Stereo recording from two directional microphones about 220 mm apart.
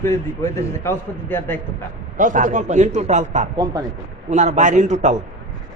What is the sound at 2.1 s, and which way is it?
A man's voice, 35° right (ahead or behind).